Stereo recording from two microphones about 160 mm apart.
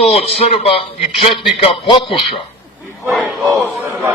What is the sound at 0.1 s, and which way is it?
A man's voice, 40° left (ahead or behind).